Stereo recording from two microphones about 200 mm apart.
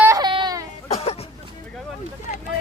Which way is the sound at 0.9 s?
30° left (ahead or behind).